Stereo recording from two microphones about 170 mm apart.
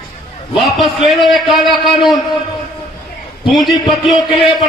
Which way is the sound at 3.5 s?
Centre (ahead or behind).